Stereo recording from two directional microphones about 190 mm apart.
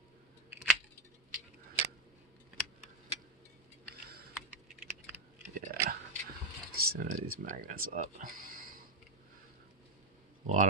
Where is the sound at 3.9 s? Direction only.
55° right (ahead or behind).